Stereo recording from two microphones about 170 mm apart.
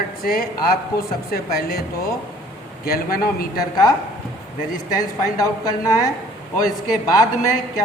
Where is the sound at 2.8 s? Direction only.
60° left (ahead or behind).